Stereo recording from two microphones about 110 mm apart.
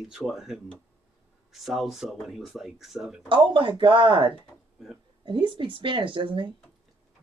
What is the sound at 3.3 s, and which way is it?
Speech, 50° right (ahead or behind).